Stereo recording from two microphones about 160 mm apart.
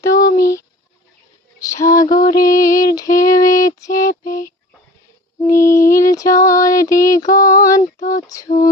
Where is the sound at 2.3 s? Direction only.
20° left (ahead or behind).